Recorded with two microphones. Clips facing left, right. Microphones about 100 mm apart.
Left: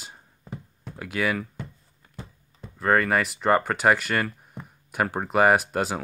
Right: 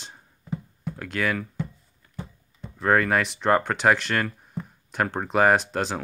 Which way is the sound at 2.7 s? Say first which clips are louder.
Even; centre (ahead or behind).